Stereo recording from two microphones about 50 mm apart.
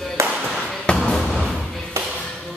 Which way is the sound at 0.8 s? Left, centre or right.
Centre.